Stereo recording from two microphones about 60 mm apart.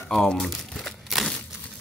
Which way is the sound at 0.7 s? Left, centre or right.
Centre.